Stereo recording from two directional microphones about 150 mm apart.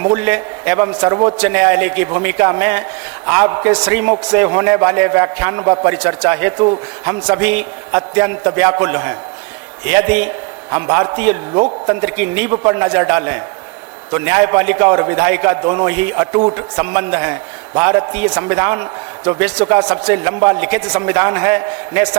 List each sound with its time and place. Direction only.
0.0 s a man's voice: 10° right (ahead or behind)